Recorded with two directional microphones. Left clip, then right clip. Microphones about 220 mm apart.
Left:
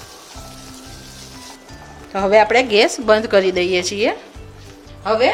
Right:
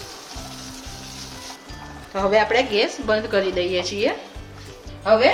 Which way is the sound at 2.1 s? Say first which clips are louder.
Left 5 dB; 45° left (ahead or behind).